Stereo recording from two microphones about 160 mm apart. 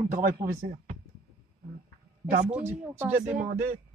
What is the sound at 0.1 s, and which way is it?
Speech, 60° right (ahead or behind).